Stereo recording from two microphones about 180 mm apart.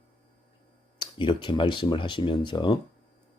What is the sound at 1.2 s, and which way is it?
Speech, 25° left (ahead or behind).